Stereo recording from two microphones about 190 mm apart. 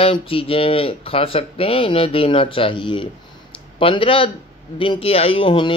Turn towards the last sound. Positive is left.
turn(degrees=25)  # may be behind; listen again after turning